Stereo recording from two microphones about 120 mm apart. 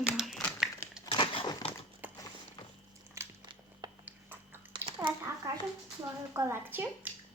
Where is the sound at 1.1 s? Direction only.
45° left (ahead or behind).